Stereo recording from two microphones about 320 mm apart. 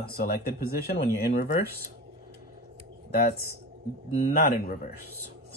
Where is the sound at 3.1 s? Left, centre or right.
Left.